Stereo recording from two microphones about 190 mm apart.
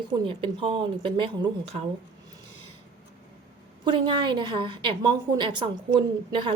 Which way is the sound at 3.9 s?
25° right (ahead or behind).